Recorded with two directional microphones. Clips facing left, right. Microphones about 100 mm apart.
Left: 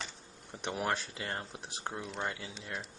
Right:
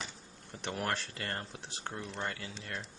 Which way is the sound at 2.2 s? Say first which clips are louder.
Left 1 dB; 15° left (ahead or behind).